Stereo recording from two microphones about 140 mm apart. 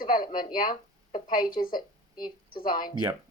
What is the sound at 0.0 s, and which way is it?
Speech, 85° left.